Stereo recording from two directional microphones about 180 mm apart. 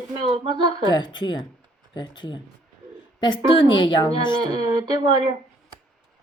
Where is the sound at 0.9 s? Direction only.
25° left (ahead or behind).